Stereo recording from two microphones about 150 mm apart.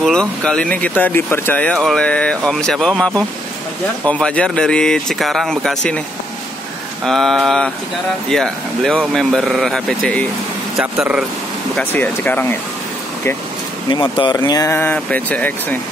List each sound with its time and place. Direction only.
0.0 s speech: 5° left (ahead or behind)
7.1 s speech: centre (ahead or behind)
11.7 s speech: 10° left (ahead or behind)
13.8 s speech: 30° left (ahead or behind); by 15.8 s 10° left (ahead or behind)